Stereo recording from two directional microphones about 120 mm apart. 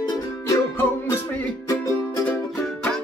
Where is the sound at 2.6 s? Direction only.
5° left (ahead or behind).